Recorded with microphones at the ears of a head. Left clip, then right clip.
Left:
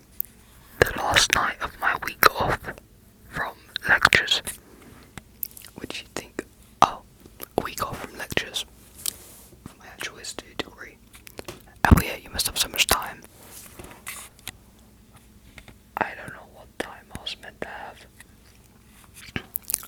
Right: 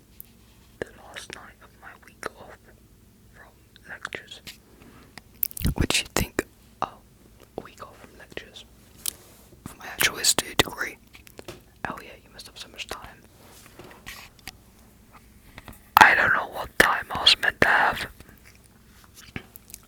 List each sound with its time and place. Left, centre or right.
0.8 s whispering: left
5.5 s whispering: right
6.7 s whispering: left
9.7 s whispering: right
11.8 s whispering: left
16.0 s whispering: right